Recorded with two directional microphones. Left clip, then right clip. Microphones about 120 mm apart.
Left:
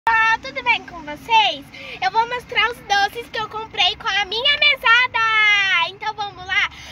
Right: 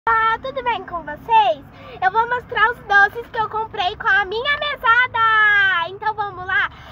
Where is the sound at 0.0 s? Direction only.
10° right (ahead or behind).